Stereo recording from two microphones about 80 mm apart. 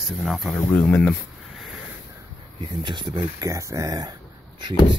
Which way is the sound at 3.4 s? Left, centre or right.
Right.